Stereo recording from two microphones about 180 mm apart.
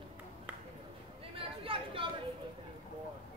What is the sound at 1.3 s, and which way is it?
Chatter, 30° right (ahead or behind).